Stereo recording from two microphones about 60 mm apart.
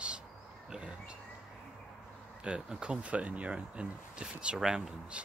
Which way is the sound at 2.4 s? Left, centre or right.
Centre.